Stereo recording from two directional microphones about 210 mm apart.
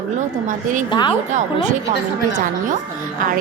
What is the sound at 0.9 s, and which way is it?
Speech, 20° left (ahead or behind).